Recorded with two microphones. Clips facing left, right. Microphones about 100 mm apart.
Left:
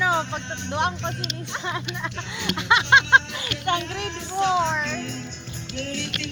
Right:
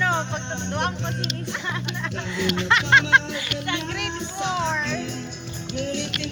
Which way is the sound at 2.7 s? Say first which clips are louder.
Left 2 dB; 20° left (ahead or behind).